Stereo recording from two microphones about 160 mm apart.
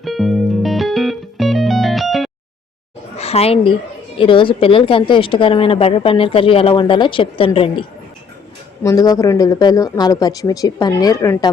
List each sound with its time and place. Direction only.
0.0 s music: centre (ahead or behind)
3.2 s a woman's voice: 40° left (ahead or behind)
8.8 s speech: 20° left (ahead or behind)